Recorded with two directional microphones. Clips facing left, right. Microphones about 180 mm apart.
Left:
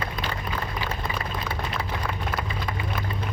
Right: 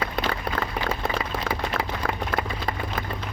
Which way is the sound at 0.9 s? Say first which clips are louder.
Right 4 dB; 90° right.